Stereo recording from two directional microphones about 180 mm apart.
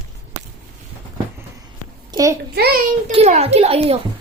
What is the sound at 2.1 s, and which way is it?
Speech, 20° right (ahead or behind).